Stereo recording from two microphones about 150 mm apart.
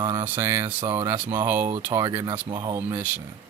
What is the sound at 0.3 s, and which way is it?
Speech, 20° right (ahead or behind).